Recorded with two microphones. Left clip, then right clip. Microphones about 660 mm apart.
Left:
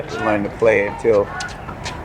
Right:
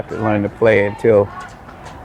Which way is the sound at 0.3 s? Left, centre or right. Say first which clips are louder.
Right 1 dB; right.